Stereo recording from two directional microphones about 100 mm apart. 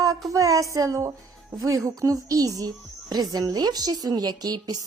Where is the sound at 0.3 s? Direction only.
35° right (ahead or behind).